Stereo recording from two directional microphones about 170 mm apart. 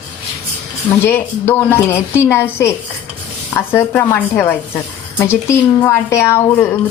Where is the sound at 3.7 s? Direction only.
10° left (ahead or behind).